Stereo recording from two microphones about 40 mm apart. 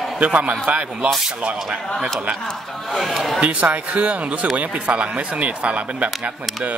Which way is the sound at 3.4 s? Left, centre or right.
Right.